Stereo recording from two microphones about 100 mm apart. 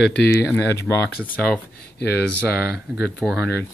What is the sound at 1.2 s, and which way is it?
Speech, 15° left (ahead or behind).